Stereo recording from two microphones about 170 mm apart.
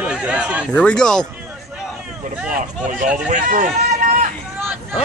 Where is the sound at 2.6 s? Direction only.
50° right (ahead or behind).